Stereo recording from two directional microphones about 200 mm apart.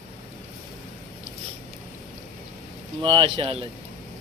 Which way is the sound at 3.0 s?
25° right (ahead or behind).